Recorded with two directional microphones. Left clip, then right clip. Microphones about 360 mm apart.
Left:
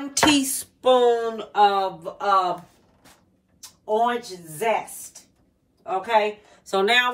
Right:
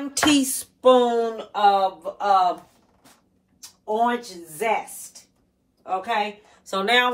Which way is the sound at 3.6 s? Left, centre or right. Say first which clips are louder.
Even; right.